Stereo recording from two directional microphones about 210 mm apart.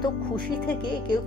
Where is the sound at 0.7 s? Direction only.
20° left (ahead or behind).